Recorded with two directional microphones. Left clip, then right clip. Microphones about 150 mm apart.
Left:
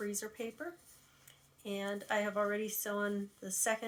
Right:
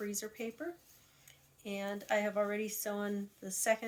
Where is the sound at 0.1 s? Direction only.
30° left (ahead or behind).